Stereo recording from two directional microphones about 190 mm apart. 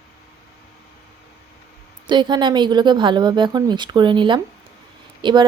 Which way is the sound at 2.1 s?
25° right (ahead or behind).